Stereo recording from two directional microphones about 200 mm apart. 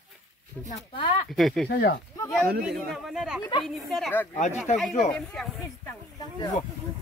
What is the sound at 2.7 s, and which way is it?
Speech, centre (ahead or behind).